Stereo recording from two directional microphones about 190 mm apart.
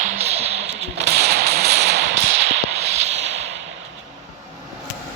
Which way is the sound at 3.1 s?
35° right (ahead or behind).